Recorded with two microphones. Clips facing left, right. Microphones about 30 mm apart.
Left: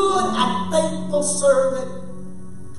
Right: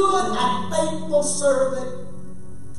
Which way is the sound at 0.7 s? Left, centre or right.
Centre.